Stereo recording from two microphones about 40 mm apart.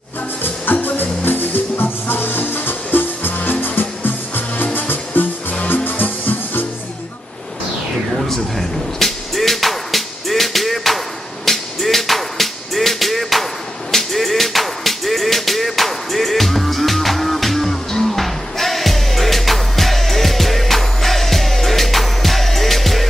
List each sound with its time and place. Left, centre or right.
0.8 s music: left
8.3 s music: centre